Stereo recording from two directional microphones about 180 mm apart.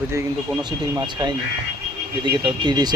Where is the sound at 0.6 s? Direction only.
25° right (ahead or behind).